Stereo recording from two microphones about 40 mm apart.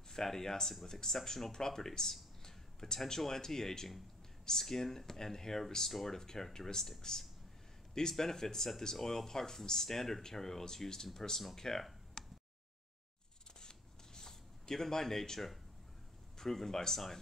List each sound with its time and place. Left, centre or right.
0.1 s speech: centre
11.5 s a sound: centre
13.6 s shuffling cards: centre
16.3 s speech: centre